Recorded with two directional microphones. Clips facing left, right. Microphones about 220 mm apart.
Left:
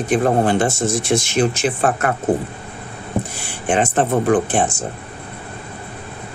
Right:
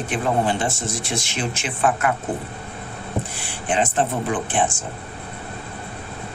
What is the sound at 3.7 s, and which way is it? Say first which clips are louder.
Speech: left 4 dB; 50° left (ahead or behind).